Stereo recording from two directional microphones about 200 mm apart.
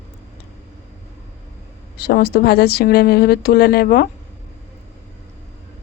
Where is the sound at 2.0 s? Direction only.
50° left (ahead or behind).